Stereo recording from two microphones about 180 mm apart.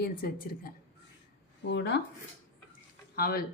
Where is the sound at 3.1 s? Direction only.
55° left (ahead or behind).